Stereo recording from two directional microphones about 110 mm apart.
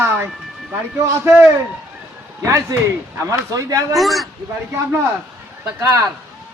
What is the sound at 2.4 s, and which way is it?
Speech, 25° right (ahead or behind).